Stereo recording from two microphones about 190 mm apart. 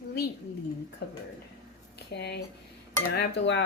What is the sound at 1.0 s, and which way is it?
Cutlery, 60° left (ahead or behind).